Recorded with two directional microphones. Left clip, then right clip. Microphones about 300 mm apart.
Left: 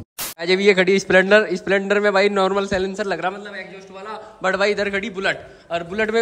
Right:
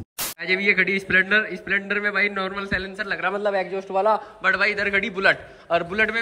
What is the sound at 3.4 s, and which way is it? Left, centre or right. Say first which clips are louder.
Speech: right 10 dB; centre.